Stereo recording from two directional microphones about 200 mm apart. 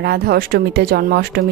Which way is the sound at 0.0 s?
50° right (ahead or behind).